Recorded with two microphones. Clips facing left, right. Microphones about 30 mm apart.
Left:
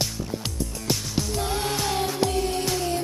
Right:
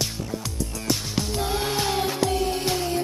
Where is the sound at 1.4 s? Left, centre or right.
Centre.